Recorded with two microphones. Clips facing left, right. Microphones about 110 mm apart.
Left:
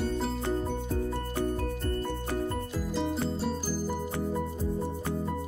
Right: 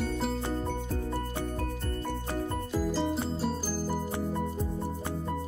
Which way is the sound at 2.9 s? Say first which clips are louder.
Left 3 dB; centre (ahead or behind).